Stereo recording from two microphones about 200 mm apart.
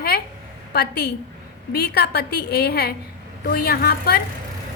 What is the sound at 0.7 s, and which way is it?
A woman's voice, 55° left (ahead or behind).